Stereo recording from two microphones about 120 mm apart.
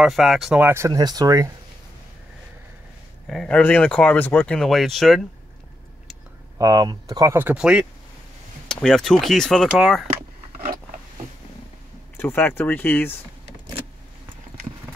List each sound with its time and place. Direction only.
0.0 s speech: centre (ahead or behind)
0.6 s speech: 20° right (ahead or behind)
3.3 s speech: 5° left (ahead or behind)
4.6 s speech: centre (ahead or behind)
6.6 s speech: 30° right (ahead or behind)
7.3 s speech: 10° right (ahead or behind)
8.6 s speech: 5° left (ahead or behind)
12.2 s speech: 20° left (ahead or behind)